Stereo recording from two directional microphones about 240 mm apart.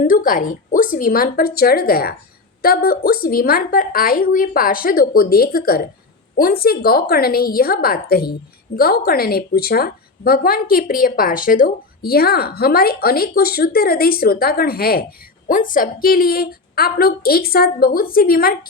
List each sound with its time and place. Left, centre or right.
0.0 s a woman's voice: left